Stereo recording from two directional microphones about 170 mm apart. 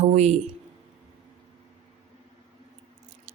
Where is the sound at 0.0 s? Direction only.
40° right (ahead or behind).